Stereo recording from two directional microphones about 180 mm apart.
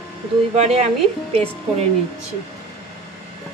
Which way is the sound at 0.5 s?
35° right (ahead or behind).